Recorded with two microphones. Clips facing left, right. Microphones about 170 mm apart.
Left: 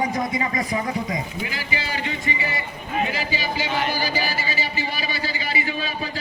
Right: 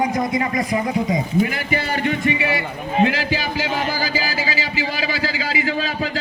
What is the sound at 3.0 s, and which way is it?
Speech, 90° right.